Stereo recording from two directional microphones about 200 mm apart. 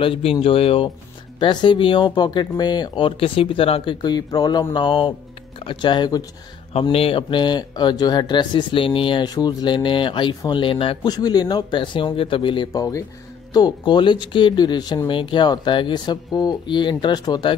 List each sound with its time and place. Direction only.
0.0 s speech: 25° left (ahead or behind)